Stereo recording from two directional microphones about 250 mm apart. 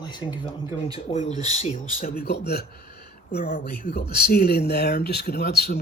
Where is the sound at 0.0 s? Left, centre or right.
Centre.